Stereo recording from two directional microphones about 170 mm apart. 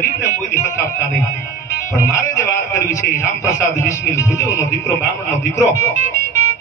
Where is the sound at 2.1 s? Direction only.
15° left (ahead or behind).